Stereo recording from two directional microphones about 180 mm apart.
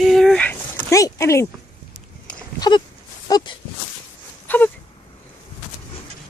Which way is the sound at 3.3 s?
20° left (ahead or behind).